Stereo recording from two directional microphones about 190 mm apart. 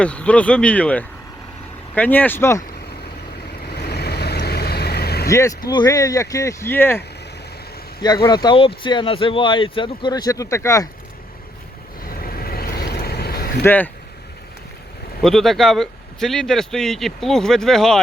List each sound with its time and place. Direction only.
0.0 s speech: 5° left (ahead or behind)
3.7 s vehicle: 55° left (ahead or behind)
5.3 s speech: 15° left (ahead or behind)
8.0 s speech: 20° left (ahead or behind)
12.0 s boat: 50° left (ahead or behind)
13.7 s speech: 10° left (ahead or behind)
15.2 s speech: centre (ahead or behind)